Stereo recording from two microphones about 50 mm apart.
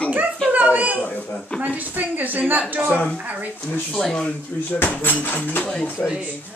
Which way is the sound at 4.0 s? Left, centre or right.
Centre.